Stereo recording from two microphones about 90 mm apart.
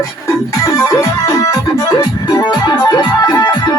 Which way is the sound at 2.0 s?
45° left (ahead or behind).